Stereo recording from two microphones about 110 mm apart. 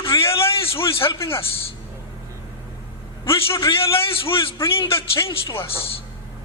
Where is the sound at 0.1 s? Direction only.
40° left (ahead or behind).